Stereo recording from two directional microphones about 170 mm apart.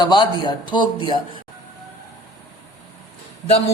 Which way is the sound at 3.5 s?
35° left (ahead or behind).